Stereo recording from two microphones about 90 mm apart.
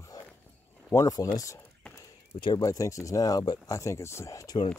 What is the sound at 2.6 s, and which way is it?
Speech, 35° left (ahead or behind).